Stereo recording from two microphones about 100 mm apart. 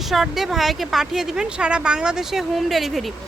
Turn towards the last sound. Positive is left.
turn(degrees=0)  # may be behind; listen again after turning